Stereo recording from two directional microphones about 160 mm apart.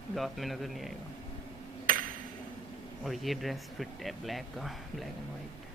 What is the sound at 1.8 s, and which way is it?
Ping, 60° right (ahead or behind).